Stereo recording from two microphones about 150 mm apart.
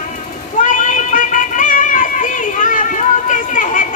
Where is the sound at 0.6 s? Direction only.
60° left (ahead or behind).